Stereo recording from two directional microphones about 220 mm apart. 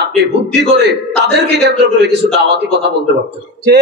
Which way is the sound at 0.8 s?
50° right (ahead or behind).